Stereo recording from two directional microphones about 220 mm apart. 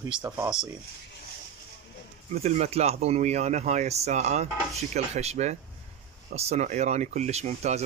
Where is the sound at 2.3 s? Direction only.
30° right (ahead or behind).